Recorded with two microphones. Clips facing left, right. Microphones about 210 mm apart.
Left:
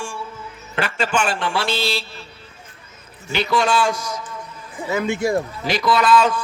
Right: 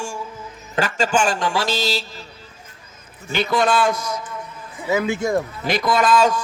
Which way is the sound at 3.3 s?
50° right (ahead or behind).